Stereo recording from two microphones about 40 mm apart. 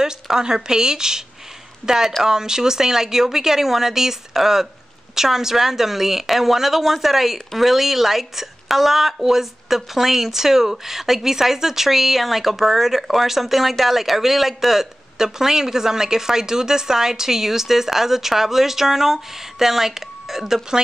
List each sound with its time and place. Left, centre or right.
0.0 s a woman's voice: centre